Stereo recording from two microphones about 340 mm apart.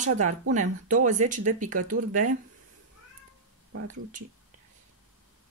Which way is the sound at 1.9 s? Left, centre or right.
Right.